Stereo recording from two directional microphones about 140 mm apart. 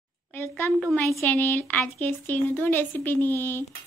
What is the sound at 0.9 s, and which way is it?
Speech, 20° left (ahead or behind).